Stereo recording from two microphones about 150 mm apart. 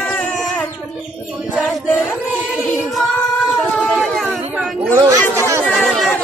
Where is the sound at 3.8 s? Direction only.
Centre (ahead or behind).